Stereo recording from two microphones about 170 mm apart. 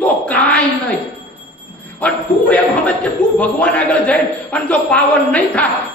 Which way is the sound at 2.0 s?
10° left (ahead or behind).